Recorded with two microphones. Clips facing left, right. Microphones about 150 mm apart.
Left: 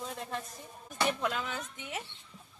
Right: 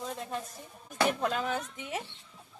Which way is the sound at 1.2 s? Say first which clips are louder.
Right 4 dB; 40° right (ahead or behind).